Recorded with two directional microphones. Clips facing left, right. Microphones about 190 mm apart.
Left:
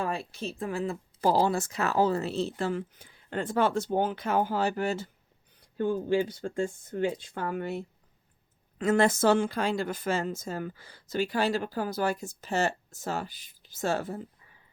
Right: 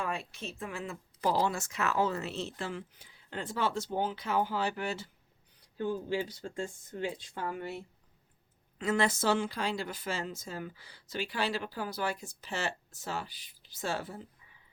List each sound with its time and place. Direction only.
0.0 s speech: 35° left (ahead or behind); by 7.8 s 55° left (ahead or behind)
8.8 s speech: 50° left (ahead or behind)